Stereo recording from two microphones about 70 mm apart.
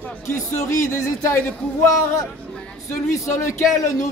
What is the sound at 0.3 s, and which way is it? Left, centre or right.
Speech, left.